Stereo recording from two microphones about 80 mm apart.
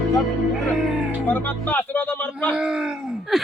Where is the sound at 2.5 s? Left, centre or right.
Centre.